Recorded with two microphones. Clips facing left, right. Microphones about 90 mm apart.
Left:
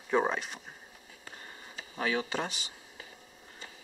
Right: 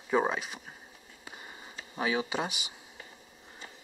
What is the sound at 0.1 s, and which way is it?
Speech, 5° right (ahead or behind).